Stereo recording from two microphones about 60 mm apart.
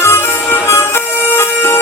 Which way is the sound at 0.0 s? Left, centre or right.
Left.